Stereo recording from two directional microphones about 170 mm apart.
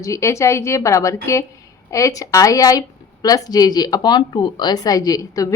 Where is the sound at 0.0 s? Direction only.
15° left (ahead or behind).